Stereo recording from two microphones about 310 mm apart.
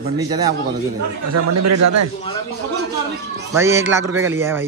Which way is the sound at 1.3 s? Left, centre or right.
Right.